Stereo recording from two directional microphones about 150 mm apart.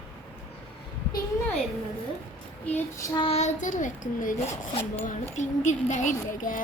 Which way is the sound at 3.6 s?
55° left (ahead or behind).